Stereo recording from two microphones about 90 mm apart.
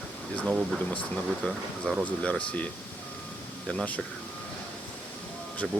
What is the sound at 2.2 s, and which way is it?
Speech, 15° left (ahead or behind).